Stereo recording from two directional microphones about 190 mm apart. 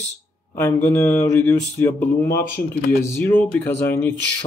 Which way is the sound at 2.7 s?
10° left (ahead or behind).